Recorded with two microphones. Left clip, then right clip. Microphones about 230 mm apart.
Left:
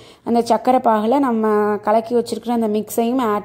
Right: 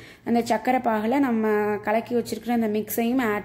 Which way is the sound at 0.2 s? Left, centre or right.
Left.